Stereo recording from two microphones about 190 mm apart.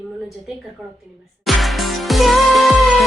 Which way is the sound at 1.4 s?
Centre (ahead or behind).